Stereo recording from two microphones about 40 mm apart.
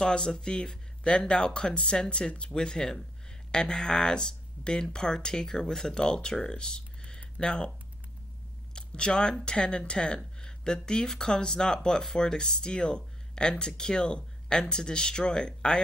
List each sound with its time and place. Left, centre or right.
0.0 s speech: centre
8.7 s speech: left